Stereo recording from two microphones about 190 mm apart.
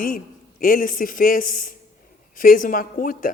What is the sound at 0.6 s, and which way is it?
Speech, 45° left (ahead or behind).